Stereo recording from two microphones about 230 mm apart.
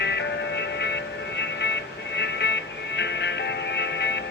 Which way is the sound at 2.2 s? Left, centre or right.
Left.